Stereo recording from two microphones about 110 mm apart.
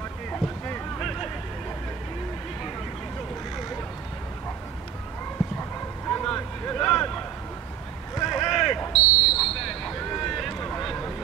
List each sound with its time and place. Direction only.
0.9 s vehicle: centre (ahead or behind)
5.6 s dog: 15° left (ahead or behind)
6.2 s a sound: 5° left (ahead or behind)